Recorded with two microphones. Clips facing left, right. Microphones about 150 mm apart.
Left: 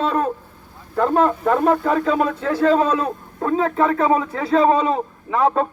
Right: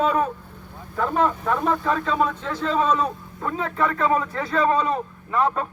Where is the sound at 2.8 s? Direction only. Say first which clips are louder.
Left 2 dB; 60° left (ahead or behind).